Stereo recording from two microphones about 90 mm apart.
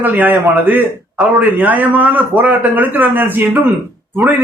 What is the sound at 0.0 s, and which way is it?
A man's voice, 20° right (ahead or behind).